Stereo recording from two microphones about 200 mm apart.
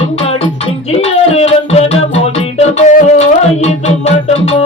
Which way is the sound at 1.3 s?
30° left (ahead or behind).